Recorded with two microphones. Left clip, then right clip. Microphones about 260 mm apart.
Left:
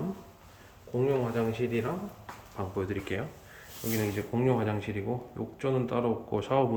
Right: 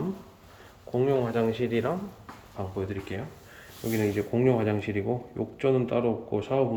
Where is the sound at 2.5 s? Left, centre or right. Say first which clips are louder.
Even; centre.